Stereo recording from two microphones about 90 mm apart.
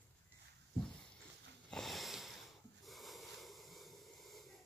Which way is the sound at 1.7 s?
Centre (ahead or behind).